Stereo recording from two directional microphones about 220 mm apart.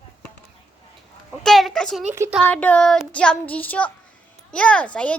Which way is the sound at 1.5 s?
Centre (ahead or behind).